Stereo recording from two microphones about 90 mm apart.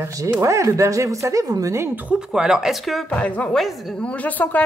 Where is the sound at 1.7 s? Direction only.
25° right (ahead or behind).